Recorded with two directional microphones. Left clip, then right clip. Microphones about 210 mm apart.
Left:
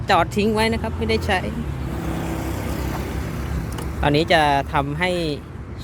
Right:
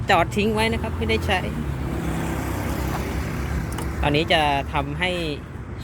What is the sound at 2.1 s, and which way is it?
Vehicle, 40° left (ahead or behind).